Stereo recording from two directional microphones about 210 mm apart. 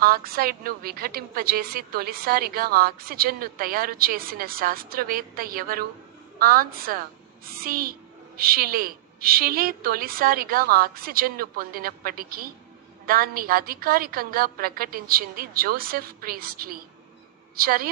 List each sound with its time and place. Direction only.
0.0 s a woman's voice: 45° right (ahead or behind)